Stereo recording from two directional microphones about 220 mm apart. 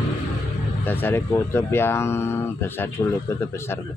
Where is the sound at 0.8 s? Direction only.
10° left (ahead or behind).